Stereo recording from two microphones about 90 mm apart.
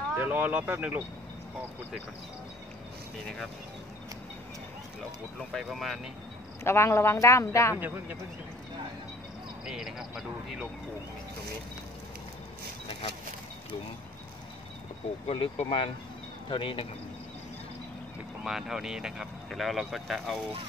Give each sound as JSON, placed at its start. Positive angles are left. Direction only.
{"t": 0.1, "sound": "speech", "side_deg": -20}
{"t": 5.5, "sound": "speech", "side_deg": 0}
{"t": 6.6, "sound": "speech", "side_deg": 30}
{"t": 7.7, "sound": "speech", "side_deg": -20}
{"t": 9.7, "sound": "speech", "side_deg": -5}
{"t": 15.3, "sound": "speech", "side_deg": 80}
{"t": 16.4, "sound": "speech", "side_deg": 70}
{"t": 18.4, "sound": "speech", "side_deg": -5}